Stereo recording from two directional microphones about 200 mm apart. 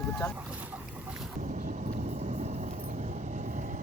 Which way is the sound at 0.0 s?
10° left (ahead or behind).